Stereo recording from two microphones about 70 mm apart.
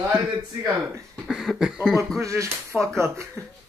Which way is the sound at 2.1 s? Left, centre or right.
Right.